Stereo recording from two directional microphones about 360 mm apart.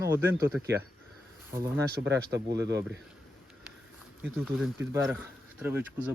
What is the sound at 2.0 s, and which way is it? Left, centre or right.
Speech, right.